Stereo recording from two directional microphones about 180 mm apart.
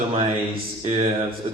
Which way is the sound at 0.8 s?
30° right (ahead or behind).